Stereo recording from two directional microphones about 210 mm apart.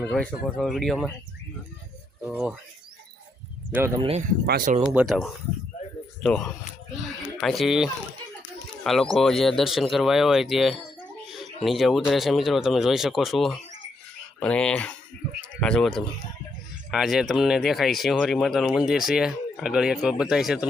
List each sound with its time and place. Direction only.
0.0 s speech: 5° left (ahead or behind)
2.2 s speech: 5° right (ahead or behind)
3.7 s speech: 10° right (ahead or behind)
4.4 s speech: 45° right (ahead or behind)
4.9 s speech: 5° right (ahead or behind)